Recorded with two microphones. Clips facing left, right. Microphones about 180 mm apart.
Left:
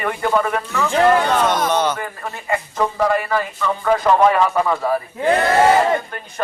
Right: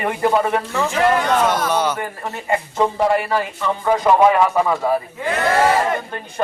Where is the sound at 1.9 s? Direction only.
25° right (ahead or behind).